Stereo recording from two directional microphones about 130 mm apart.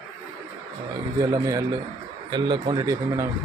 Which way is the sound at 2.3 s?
35° right (ahead or behind).